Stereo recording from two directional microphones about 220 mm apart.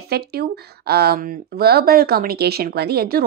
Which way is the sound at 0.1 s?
45° right (ahead or behind).